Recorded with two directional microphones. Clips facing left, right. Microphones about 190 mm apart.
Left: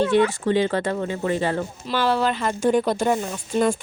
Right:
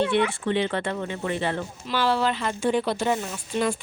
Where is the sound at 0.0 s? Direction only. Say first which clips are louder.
Left 4 dB; 40° left (ahead or behind).